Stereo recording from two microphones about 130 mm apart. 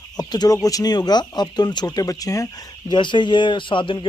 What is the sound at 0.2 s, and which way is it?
Speech, 30° left (ahead or behind).